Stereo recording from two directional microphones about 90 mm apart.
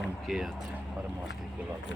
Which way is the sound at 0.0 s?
Centre (ahead or behind).